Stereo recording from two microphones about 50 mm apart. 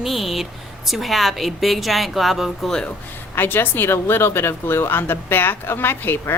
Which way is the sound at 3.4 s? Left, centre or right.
Left.